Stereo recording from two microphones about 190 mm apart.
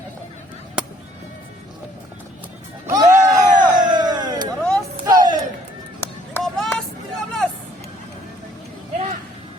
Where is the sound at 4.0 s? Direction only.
20° right (ahead or behind).